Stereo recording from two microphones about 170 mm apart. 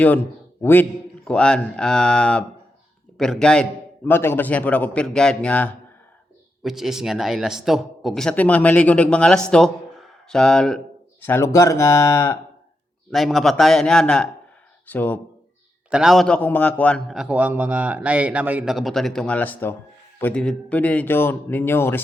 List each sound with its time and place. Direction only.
0.6 s a man's voice: 10° left (ahead or behind)
11.2 s a man's voice: 15° left (ahead or behind)
13.1 s a man's voice: centre (ahead or behind)
15.9 s a man's voice: 5° right (ahead or behind); by 22.0 s 15° left (ahead or behind)